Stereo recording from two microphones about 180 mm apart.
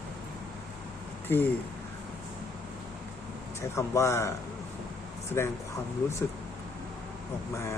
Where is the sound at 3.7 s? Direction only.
15° left (ahead or behind).